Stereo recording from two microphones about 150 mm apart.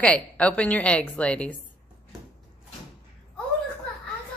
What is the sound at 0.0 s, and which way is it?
A woman's voice, 10° left (ahead or behind).